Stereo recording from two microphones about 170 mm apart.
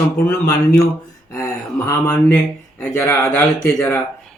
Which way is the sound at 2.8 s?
15° left (ahead or behind).